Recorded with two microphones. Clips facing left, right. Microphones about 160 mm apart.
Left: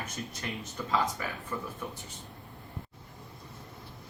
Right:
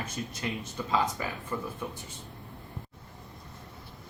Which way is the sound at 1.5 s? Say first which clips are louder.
Right 3 dB; 25° right (ahead or behind).